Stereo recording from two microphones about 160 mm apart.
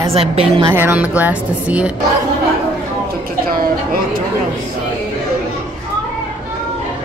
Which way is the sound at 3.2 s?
65° right (ahead or behind).